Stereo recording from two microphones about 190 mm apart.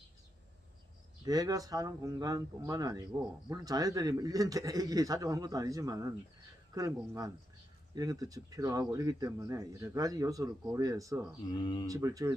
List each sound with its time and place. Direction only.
1.2 s a man's voice: 20° right (ahead or behind)
11.4 s speech: 25° left (ahead or behind)
11.9 s speech: 15° right (ahead or behind)